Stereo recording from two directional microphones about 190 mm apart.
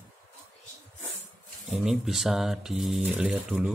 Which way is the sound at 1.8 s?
Centre (ahead or behind).